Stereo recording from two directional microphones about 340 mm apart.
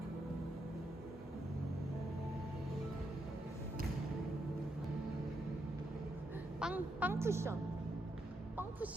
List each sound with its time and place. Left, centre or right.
6.6 s a woman's voice: centre